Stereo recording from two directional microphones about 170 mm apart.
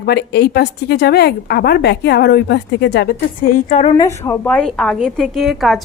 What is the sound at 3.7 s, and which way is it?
Speech, 40° left (ahead or behind).